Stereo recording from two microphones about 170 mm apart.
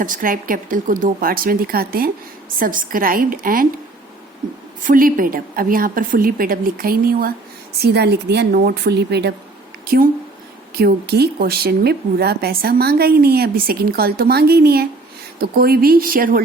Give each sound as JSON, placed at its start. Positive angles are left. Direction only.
{"t": 0.0, "sound": "a woman's voice", "side_deg": -55}
{"t": 4.8, "sound": "a woman's voice", "side_deg": -55}
{"t": 7.8, "sound": "a woman's voice", "side_deg": -75}
{"t": 9.8, "sound": "a woman's voice", "side_deg": -65}